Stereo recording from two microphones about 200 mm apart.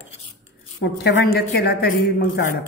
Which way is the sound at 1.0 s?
55° left (ahead or behind).